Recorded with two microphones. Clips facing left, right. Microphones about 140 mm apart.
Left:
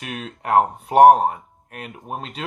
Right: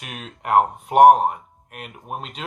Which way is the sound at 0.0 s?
35° left (ahead or behind).